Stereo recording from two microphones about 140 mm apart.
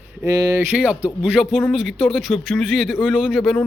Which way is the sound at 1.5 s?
5° left (ahead or behind).